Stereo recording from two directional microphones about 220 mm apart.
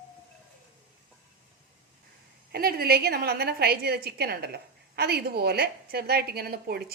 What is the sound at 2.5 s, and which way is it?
A woman's voice, 45° right (ahead or behind).